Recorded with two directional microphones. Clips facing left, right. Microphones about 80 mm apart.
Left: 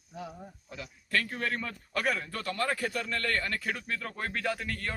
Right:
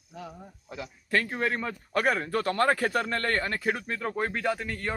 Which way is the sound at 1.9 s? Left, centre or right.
Right.